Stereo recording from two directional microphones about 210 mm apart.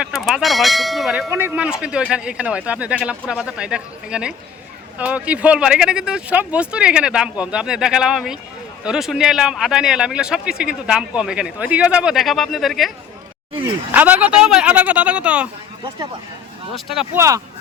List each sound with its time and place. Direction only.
0.0 s speech: centre (ahead or behind)
1.3 s a man's voice: 10° right (ahead or behind)
13.9 s a man's voice: 10° right (ahead or behind)
16.7 s a man's voice: centre (ahead or behind)
17.2 s speech: 15° right (ahead or behind)